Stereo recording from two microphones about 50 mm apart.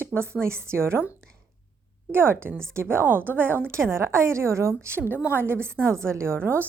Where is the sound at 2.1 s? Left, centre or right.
Right.